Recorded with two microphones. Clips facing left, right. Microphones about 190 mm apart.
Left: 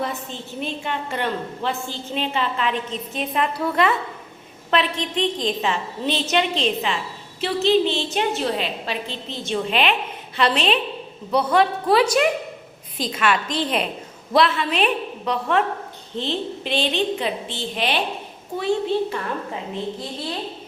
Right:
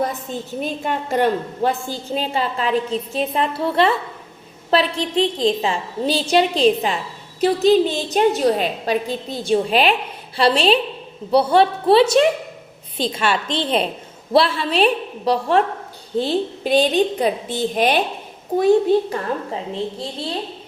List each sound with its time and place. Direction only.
0.0 s a woman's voice: 40° right (ahead or behind)